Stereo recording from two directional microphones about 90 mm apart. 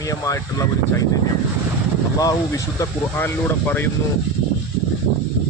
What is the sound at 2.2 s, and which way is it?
Speech, 40° left (ahead or behind).